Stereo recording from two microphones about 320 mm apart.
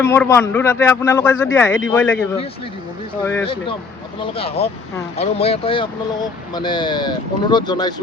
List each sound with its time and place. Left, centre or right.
0.0 s a man's voice: centre
3.2 s a man's voice: centre